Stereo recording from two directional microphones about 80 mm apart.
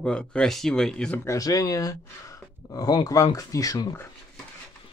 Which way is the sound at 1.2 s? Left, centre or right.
Left.